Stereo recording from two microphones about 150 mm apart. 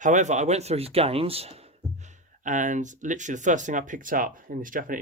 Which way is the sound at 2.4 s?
55° right (ahead or behind).